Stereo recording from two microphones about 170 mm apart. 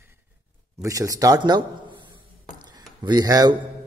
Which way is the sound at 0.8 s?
20° right (ahead or behind).